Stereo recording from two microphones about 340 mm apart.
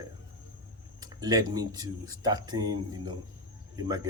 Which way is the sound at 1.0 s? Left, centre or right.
Centre.